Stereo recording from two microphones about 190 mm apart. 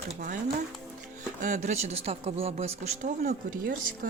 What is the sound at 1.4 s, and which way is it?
Speech, 40° right (ahead or behind).